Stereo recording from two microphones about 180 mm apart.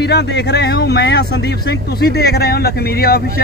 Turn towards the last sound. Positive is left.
turn(degrees=55)  # may be behind; listen again after turning